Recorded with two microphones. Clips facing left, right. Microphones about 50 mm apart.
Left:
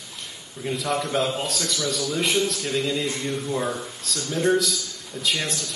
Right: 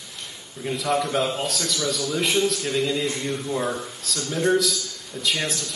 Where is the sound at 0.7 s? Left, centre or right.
Centre.